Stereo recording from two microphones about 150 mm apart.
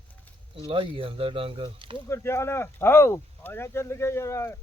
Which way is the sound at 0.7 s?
35° right (ahead or behind).